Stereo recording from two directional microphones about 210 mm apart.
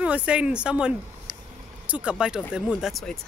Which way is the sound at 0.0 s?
5° right (ahead or behind).